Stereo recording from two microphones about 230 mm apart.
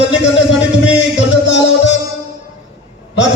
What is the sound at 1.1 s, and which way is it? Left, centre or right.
Music, left.